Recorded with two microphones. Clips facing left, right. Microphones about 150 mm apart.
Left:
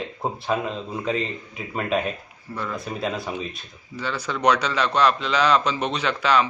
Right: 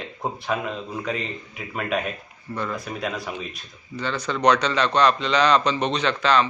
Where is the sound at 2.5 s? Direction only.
Centre (ahead or behind).